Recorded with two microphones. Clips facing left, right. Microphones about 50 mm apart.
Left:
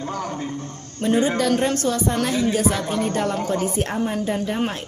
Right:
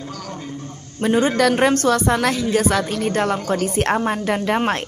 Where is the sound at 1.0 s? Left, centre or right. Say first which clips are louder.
Right 3 dB; right.